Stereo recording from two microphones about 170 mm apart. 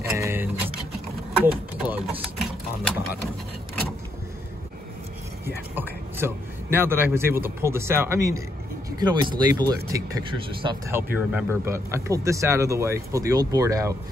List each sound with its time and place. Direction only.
0.0 s music: 15° right (ahead or behind)
1.4 s a sound: 10° right (ahead or behind)
5.8 s a man's voice: 15° right (ahead or behind)